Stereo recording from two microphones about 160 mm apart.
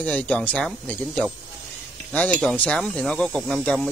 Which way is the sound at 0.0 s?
10° left (ahead or behind).